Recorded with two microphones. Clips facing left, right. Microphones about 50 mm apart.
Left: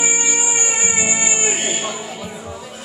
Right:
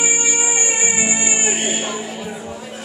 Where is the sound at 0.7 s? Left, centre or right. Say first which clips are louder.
Right 1 dB; centre.